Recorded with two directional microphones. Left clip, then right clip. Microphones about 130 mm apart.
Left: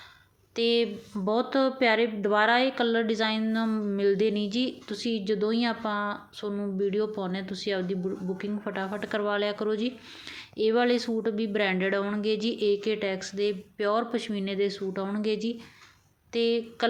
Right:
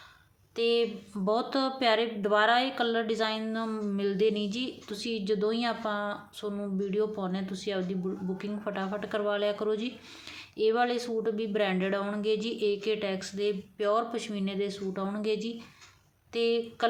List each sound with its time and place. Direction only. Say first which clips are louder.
0.5 s speech: left 2 dB; 35° left (ahead or behind)
1.2 s a woman's voice: left 3 dB; 20° left (ahead or behind)
10.6 s a woman's voice: left 2 dB; 30° left (ahead or behind)